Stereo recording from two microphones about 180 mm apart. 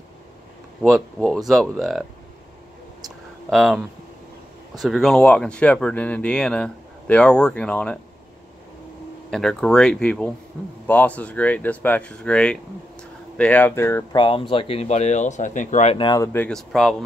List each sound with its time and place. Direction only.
0.8 s speech: centre (ahead or behind)
3.4 s speech: centre (ahead or behind)
9.3 s speech: 5° left (ahead or behind)
14.1 s speech: 25° left (ahead or behind)
16.1 s speech: 20° left (ahead or behind)
16.4 s speech: centre (ahead or behind)